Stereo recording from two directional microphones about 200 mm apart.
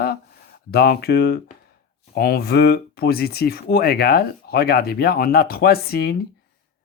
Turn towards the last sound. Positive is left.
turn(degrees=50)  # may be behind; listen again after turning